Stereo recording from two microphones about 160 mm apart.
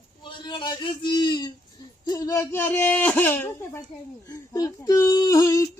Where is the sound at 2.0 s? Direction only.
25° left (ahead or behind).